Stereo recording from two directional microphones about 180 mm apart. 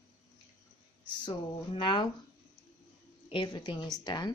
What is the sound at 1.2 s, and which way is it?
Speech, 25° left (ahead or behind).